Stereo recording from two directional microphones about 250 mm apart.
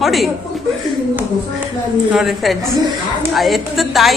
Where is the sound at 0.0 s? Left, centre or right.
Centre.